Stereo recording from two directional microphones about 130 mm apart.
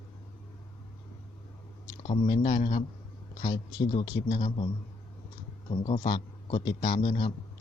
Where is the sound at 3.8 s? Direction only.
35° left (ahead or behind).